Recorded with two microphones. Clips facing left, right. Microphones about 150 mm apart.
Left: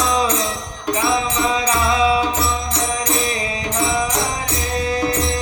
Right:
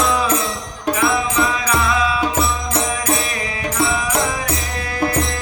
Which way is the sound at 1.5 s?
25° left (ahead or behind).